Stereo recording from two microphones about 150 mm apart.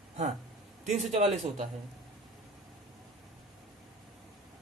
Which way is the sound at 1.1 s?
50° right (ahead or behind).